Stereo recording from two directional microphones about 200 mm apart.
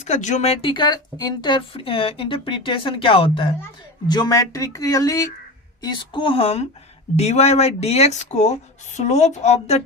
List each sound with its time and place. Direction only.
0.0 s speech: 35° left (ahead or behind)